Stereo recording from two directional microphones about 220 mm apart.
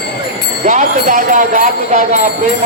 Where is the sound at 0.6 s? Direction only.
35° right (ahead or behind).